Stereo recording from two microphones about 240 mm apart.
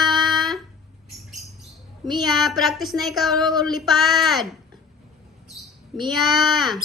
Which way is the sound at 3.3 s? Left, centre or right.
Centre.